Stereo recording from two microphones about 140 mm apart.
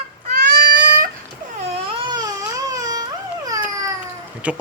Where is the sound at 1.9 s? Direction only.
30° right (ahead or behind).